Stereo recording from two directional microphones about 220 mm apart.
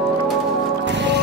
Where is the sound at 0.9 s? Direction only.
55° right (ahead or behind).